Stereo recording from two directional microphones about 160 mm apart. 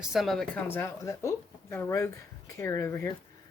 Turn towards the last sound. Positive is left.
turn(degrees=15)  # may be behind; listen again after turning